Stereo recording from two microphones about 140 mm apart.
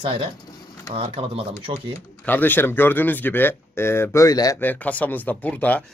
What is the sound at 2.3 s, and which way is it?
Speech, 15° left (ahead or behind).